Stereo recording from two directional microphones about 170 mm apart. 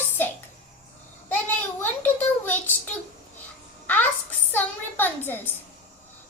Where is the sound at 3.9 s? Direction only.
10° left (ahead or behind).